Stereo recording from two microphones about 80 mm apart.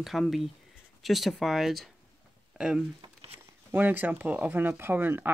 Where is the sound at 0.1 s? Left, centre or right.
Centre.